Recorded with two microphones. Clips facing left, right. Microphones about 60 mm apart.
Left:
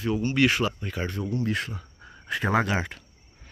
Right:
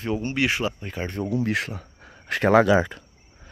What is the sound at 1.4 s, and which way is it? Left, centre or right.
Speech, right.